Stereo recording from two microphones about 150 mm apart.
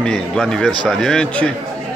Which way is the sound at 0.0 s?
5° left (ahead or behind).